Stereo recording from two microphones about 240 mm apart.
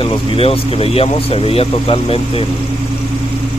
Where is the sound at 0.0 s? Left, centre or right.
Left.